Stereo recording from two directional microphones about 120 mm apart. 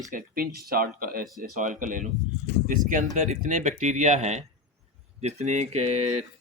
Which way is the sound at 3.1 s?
90° right.